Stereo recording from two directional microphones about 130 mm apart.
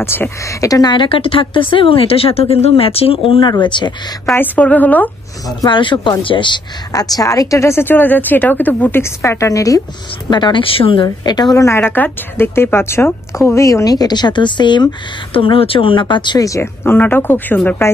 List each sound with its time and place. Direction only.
0.0 s speech: 20° left (ahead or behind); by 3.9 s 35° left (ahead or behind)
4.4 s a woman's voice: 10° left (ahead or behind)
5.6 s speech: 40° left (ahead or behind)
10.3 s speech: 35° left (ahead or behind)
11.5 s a woman's voice: 20° left (ahead or behind)